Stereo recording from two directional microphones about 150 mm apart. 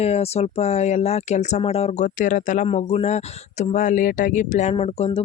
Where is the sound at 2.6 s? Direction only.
45° left (ahead or behind).